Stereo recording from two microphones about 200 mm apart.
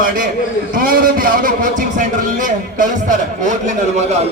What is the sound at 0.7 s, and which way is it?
A man's voice, 45° right (ahead or behind).